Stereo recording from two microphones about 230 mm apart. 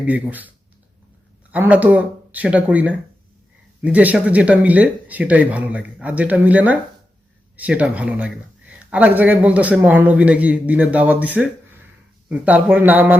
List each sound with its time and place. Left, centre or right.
0.0 s speech: centre